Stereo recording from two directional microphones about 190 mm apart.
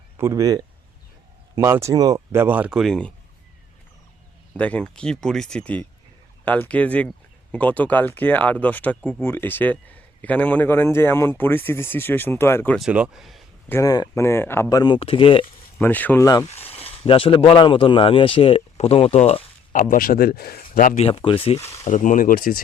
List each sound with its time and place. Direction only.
0.2 s speech: 15° right (ahead or behind); by 3.1 s centre (ahead or behind)
4.5 s speech: 5° left (ahead or behind)
12.8 s speech: 5° right (ahead or behind)
13.7 s speech: 15° left (ahead or behind)
15.8 s speech: 10° left (ahead or behind)
16.5 s speech: 30° left (ahead or behind)
21.0 s speech: 30° left (ahead or behind)
21.7 s speech: 40° left (ahead or behind)